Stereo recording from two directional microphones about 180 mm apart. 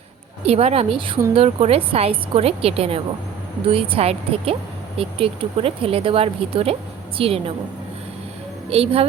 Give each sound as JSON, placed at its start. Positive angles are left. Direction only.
{"t": 0.4, "sound": "speech", "side_deg": -35}
{"t": 8.7, "sound": "speech", "side_deg": -30}